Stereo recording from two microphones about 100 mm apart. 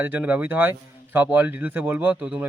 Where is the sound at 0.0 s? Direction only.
15° right (ahead or behind).